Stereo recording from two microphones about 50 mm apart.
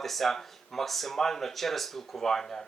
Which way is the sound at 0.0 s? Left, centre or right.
Centre.